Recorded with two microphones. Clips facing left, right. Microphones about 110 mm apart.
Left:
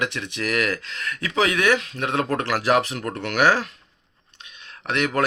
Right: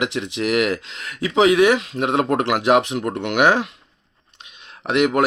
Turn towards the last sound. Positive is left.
turn(degrees=-25)  # may be behind; listen again after turning